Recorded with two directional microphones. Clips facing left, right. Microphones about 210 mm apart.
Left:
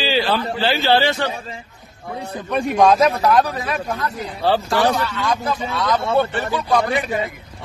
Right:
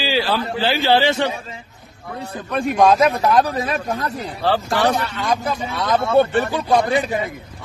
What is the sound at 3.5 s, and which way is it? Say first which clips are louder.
Speech: right 2 dB; 25° right (ahead or behind).